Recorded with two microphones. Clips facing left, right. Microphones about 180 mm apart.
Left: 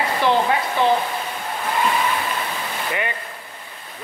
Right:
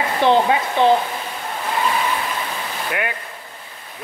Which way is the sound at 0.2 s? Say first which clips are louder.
Right 4 dB; 20° right (ahead or behind).